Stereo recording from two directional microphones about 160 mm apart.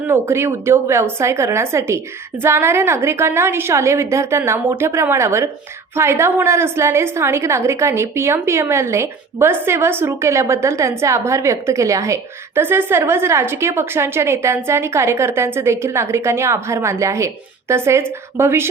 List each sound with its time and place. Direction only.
0.1 s a woman's voice: 15° right (ahead or behind)